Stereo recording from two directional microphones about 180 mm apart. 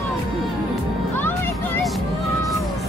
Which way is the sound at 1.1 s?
10° left (ahead or behind).